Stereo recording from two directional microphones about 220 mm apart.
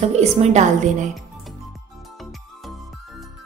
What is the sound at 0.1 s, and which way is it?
A woman's voice, 30° right (ahead or behind).